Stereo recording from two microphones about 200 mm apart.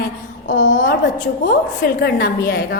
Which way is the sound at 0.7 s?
40° left (ahead or behind).